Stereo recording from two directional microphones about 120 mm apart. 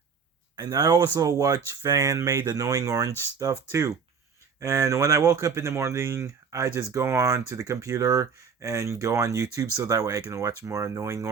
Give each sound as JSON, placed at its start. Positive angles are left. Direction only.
{"t": 0.5, "sound": "speech", "side_deg": -35}